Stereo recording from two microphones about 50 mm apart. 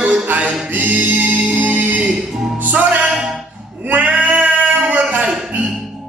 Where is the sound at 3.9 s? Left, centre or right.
Right.